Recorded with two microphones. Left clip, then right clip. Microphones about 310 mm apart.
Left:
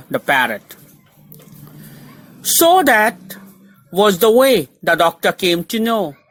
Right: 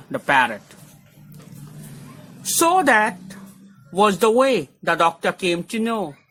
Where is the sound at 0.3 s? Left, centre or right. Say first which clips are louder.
Left 2 dB; centre.